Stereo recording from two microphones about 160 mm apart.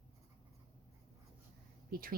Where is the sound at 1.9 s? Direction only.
65° right (ahead or behind).